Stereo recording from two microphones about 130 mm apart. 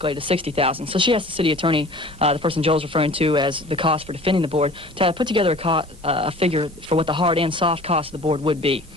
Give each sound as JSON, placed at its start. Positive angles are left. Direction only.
{"t": 0.0, "sound": "speech", "side_deg": -40}